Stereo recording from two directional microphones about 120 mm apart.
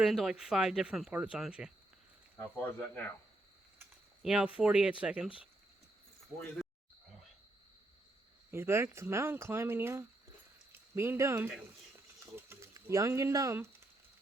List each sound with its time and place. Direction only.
0.0 s speech: centre (ahead or behind)
2.6 s speech: 15° left (ahead or behind)
4.2 s speech: 5° right (ahead or behind)
6.6 s wild animals: 5° right (ahead or behind)
8.4 s speech: 20° right (ahead or behind)
12.2 s a sound: 20° right (ahead or behind)